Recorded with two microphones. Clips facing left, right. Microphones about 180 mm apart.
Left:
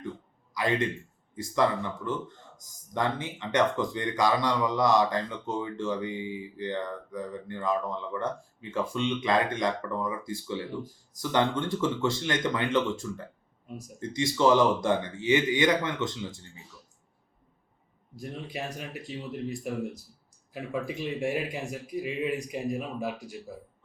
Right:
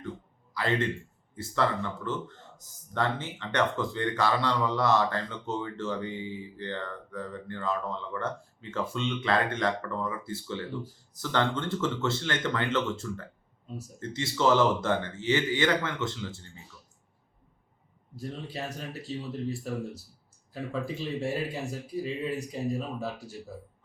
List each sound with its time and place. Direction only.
0.5 s a man's voice: 15° left (ahead or behind)
18.2 s speech: 15° left (ahead or behind)